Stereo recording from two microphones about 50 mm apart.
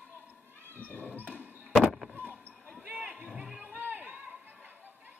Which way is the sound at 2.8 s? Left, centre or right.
Right.